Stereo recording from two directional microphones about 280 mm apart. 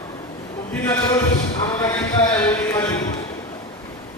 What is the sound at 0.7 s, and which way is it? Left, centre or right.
Speech, centre.